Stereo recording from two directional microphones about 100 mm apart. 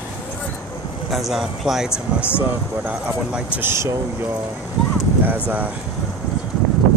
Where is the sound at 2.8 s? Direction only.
20° right (ahead or behind).